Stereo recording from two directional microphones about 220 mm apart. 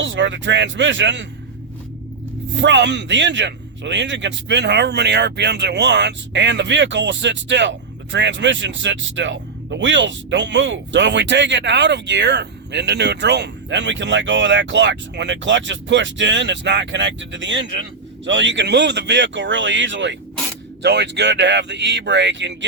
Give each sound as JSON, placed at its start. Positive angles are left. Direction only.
{"t": 0.0, "sound": "speech", "side_deg": -55}
{"t": 2.6, "sound": "a man's voice", "side_deg": -55}